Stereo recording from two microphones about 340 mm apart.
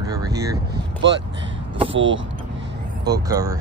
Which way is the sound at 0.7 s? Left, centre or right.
Right.